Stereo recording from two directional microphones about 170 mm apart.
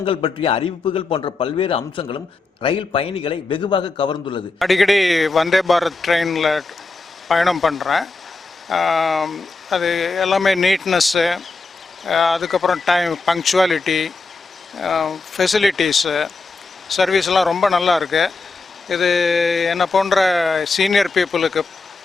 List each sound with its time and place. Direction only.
0.0 s a man's voice: 30° left (ahead or behind)
4.6 s speech: centre (ahead or behind)